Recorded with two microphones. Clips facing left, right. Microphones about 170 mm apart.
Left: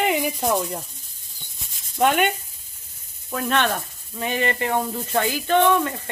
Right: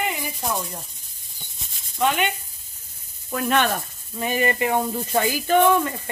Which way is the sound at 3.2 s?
5° right (ahead or behind).